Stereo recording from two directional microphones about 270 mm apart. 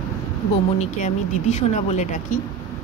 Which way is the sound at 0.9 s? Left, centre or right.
Left.